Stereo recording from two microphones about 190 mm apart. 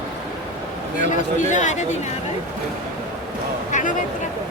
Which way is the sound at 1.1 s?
40° left (ahead or behind).